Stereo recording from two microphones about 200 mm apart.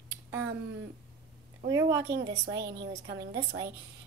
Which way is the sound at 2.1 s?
55° right (ahead or behind).